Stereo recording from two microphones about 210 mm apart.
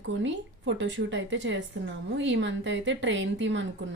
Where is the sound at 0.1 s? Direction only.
60° right (ahead or behind).